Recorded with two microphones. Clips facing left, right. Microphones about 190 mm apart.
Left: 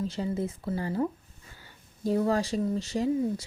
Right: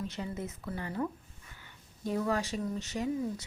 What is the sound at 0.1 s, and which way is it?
Speech, 30° left (ahead or behind).